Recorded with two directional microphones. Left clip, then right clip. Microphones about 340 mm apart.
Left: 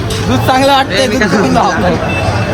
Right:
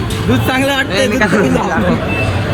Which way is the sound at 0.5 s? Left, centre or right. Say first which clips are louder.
Left 8 dB; centre.